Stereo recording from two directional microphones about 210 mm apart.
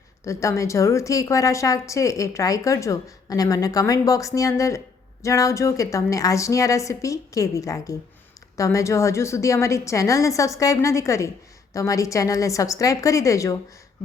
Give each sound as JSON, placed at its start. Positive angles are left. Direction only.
{"t": 0.3, "sound": "a woman's voice", "side_deg": 15}